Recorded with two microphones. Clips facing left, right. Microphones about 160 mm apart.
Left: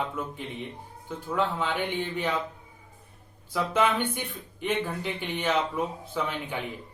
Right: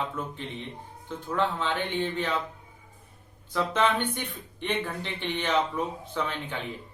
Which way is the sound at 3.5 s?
10° left (ahead or behind).